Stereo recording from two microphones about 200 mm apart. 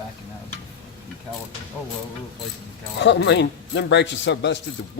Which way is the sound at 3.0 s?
60° left (ahead or behind).